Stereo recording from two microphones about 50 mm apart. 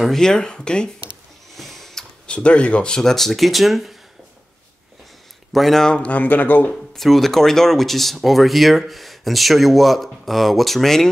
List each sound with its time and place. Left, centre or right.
0.0 s speech: centre
1.6 s a sound: centre
2.2 s speech: left
3.0 s speech: centre
5.5 s speech: centre
6.0 s speech: left
7.0 s speech: centre